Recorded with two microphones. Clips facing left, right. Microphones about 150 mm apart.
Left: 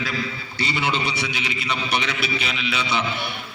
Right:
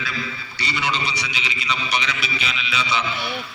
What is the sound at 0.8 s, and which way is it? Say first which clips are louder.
A man's voice: even; 55° left (ahead or behind).